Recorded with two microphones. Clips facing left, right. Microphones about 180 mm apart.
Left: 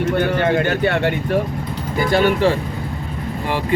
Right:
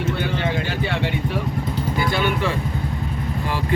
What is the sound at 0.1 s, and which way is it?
Speech, 50° left (ahead or behind).